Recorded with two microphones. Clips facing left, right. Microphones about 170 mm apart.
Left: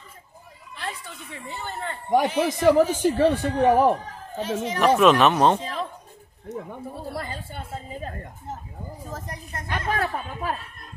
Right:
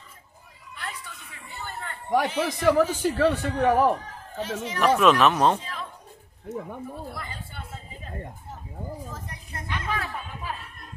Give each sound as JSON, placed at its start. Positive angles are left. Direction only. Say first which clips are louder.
{"t": 0.7, "sound": "a woman's voice", "louder": "left 4 dB", "side_deg": 30}
{"t": 3.2, "sound": "a woman's voice", "louder": "left 1 dB", "side_deg": 30}
{"t": 3.6, "sound": "speech", "louder": "left 2 dB", "side_deg": 20}
{"t": 4.8, "sound": "speech", "louder": "left 2 dB", "side_deg": 0}
{"t": 5.5, "sound": "speech", "louder": "left 3 dB", "side_deg": 35}
{"t": 7.2, "sound": "a woman's voice", "louder": "left 6 dB", "side_deg": 40}
{"t": 9.1, "sound": "a woman's voice", "louder": "left 4 dB", "side_deg": 40}